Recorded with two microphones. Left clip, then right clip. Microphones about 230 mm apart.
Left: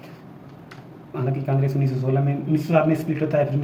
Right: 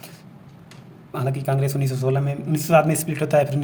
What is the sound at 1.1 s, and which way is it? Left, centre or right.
A man's voice, right.